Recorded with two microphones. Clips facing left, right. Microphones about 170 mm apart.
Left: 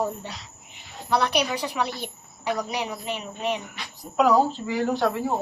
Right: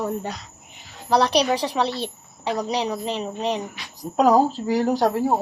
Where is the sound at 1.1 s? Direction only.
35° right (ahead or behind).